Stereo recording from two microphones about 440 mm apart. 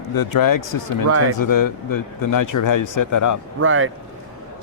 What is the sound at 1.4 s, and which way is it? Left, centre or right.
Speech, left.